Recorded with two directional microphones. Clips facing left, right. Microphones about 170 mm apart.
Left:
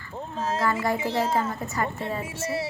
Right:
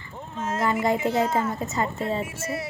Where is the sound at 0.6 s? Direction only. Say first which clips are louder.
Right 4 dB; 20° right (ahead or behind).